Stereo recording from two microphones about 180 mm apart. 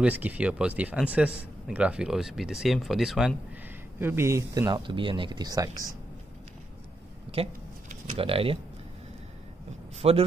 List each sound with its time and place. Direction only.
0.0 s speech: 10° right (ahead or behind)
4.0 s speech: 15° right (ahead or behind)
7.4 s speech: 30° right (ahead or behind)
10.0 s speech: 35° right (ahead or behind)